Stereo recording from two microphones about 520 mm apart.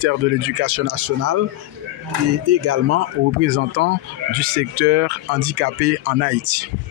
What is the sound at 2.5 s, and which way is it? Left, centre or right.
Speech, right.